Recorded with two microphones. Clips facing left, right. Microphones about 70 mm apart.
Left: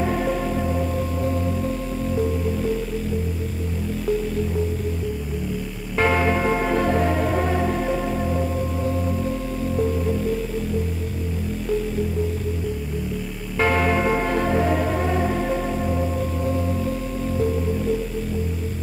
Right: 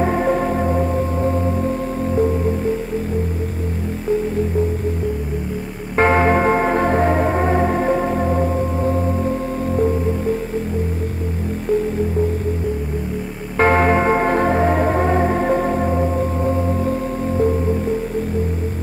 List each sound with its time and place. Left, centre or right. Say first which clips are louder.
0.0 s music: right 5 dB; right
5.9 s music: right 5 dB; right
13.6 s music: right 5 dB; right